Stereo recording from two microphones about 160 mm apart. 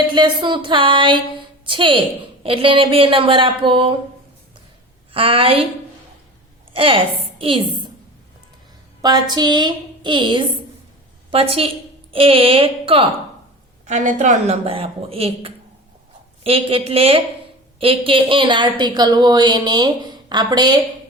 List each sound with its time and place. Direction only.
0.1 s speech: 30° right (ahead or behind)
5.1 s speech: 35° right (ahead or behind)
6.7 s speech: 35° right (ahead or behind)
9.0 s a woman's voice: 25° right (ahead or behind)
13.8 s a woman's voice: 50° right (ahead or behind); by 20.8 s 25° right (ahead or behind)